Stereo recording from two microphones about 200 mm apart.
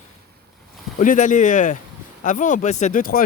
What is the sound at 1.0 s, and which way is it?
Speech, 40° left (ahead or behind).